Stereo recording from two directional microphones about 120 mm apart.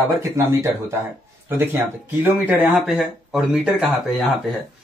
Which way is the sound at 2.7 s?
Centre (ahead or behind).